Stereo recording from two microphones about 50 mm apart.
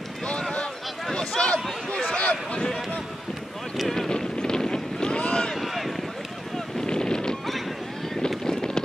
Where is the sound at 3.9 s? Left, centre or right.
Centre.